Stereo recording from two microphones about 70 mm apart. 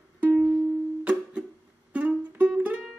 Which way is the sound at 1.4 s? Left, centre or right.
Right.